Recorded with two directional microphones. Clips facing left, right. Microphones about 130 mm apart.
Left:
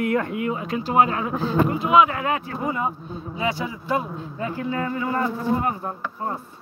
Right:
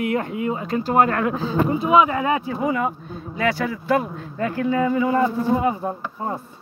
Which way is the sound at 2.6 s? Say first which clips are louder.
Right 3 dB; 90° right.